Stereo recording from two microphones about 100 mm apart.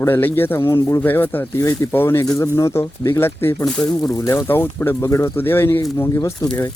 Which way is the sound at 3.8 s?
40° left (ahead or behind).